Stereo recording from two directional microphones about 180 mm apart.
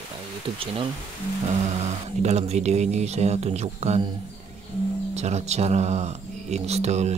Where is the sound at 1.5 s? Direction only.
40° right (ahead or behind).